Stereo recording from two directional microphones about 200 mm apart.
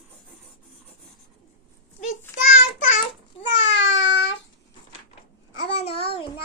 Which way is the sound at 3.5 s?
65° left (ahead or behind).